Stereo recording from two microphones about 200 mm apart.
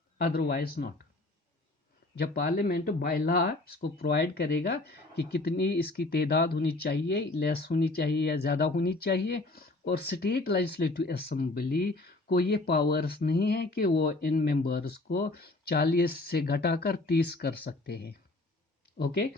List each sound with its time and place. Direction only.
0.2 s speech: 50° left (ahead or behind)
2.1 s speech: 55° left (ahead or behind)